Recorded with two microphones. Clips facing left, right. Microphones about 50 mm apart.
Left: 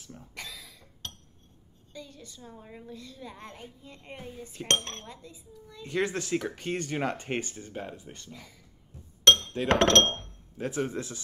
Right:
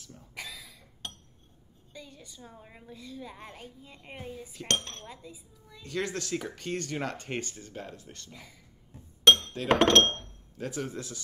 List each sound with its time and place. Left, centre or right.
0.3 s cough: centre
1.9 s a woman's voice: centre
4.6 s dishes: left
5.0 s a woman's voice: centre
5.9 s speech: left
8.3 s a woman's voice: centre
9.2 s chink: centre
9.7 s a woman's voice: centre
10.1 s speech: left